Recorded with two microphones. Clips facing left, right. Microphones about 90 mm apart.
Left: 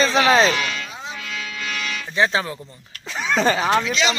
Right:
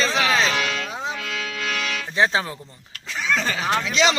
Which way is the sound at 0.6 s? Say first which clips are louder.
Right 1 dB; 75° right (ahead or behind).